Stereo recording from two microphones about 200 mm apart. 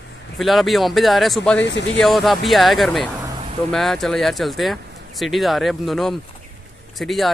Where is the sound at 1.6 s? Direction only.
65° left (ahead or behind).